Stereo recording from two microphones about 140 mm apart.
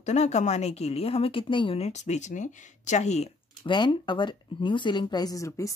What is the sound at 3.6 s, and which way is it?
Speech, 35° left (ahead or behind).